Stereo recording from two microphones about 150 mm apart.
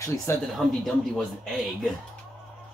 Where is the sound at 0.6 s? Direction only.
5° right (ahead or behind).